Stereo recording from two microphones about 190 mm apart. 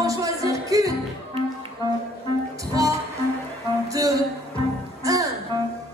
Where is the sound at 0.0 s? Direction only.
15° right (ahead or behind).